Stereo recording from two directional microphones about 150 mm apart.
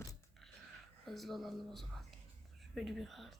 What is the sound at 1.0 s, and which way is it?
Speech, centre (ahead or behind).